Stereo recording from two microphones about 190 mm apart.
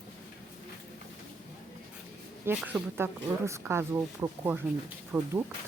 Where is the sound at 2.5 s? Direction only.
5° right (ahead or behind).